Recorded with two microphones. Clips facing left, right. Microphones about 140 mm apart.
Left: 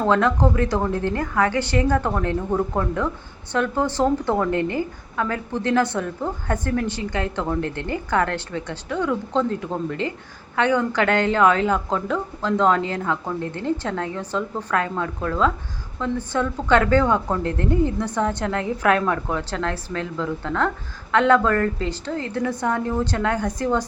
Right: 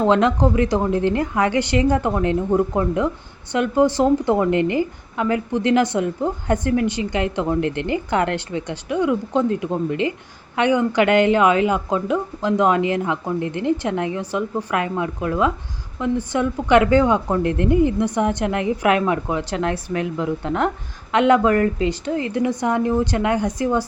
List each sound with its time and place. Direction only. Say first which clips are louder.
0.0 s a woman's voice: right 2 dB; 20° right (ahead or behind)